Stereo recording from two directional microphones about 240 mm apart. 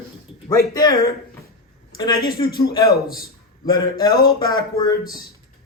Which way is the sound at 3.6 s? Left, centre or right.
Centre.